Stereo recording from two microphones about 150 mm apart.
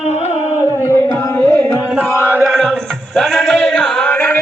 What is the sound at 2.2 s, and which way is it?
Chant, 20° right (ahead or behind).